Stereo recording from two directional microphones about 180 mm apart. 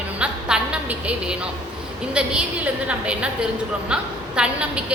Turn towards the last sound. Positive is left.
turn(degrees=-5)  # may be behind; listen again after turning